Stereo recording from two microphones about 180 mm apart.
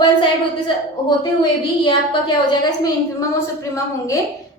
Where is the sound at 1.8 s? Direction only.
25° left (ahead or behind).